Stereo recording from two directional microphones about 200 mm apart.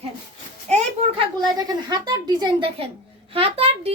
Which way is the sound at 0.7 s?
25° right (ahead or behind).